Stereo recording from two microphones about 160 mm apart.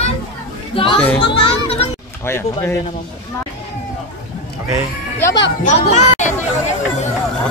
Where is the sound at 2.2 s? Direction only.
15° left (ahead or behind).